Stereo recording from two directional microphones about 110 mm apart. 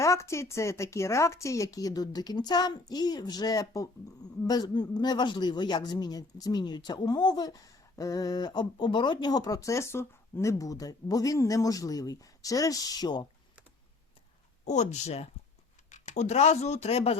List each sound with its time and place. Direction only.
0.0 s a woman's voice: 25° left (ahead or behind)
14.6 s speech: 90° left; by 17.2 s 70° left (ahead or behind)